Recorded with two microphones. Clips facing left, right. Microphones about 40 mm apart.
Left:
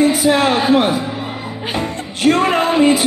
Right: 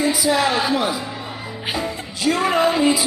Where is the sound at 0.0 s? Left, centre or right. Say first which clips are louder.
Left 5 dB; left.